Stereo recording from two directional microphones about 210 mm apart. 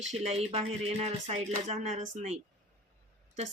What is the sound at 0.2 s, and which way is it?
Speech, 30° right (ahead or behind).